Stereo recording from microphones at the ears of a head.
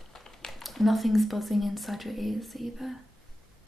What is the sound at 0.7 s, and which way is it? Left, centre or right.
Speech, centre.